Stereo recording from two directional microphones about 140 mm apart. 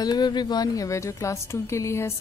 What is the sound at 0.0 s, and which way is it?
Speech, 30° left (ahead or behind).